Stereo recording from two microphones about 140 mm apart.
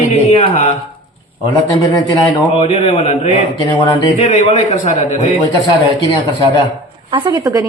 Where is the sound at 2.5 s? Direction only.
40° left (ahead or behind).